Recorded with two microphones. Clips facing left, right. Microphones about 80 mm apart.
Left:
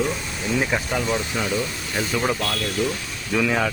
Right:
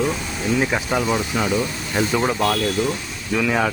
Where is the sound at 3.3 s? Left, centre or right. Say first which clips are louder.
Right 2 dB; centre.